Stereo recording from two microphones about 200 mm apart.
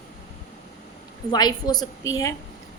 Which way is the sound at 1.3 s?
20° left (ahead or behind).